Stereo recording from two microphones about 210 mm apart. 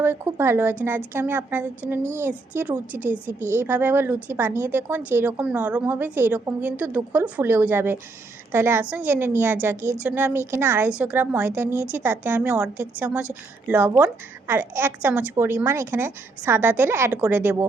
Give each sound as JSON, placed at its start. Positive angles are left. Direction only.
{"t": 0.0, "sound": "a woman's voice", "side_deg": -10}